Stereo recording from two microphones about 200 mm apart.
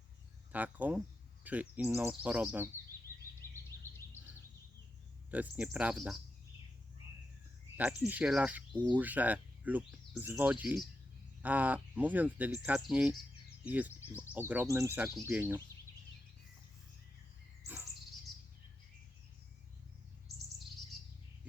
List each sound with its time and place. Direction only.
0.5 s speech: 10° right (ahead or behind)
3.7 s a sound: 50° left (ahead or behind)
5.3 s speech: 10° right (ahead or behind)
7.8 s speech: 5° right (ahead or behind)
17.6 s bird vocalization: 15° right (ahead or behind)